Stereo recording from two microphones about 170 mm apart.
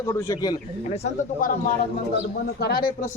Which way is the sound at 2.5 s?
70° left (ahead or behind).